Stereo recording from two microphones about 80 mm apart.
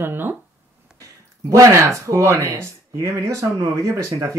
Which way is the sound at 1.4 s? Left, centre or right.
Right.